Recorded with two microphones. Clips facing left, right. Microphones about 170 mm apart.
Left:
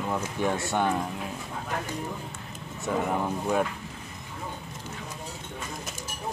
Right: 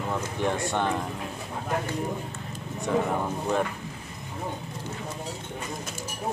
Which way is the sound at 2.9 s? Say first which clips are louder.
Right 3 dB; 5° left (ahead or behind).